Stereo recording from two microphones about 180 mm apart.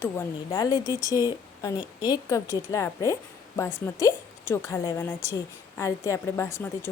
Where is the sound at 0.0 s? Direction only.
15° left (ahead or behind).